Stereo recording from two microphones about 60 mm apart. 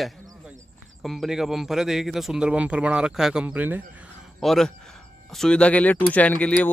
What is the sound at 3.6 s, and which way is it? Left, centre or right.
Speech, right.